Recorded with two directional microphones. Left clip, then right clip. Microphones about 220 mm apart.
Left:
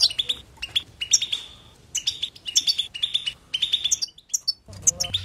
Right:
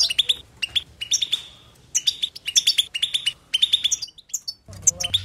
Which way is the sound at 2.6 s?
15° right (ahead or behind).